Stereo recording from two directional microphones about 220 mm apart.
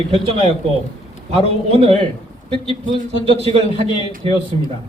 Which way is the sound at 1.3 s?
25° right (ahead or behind).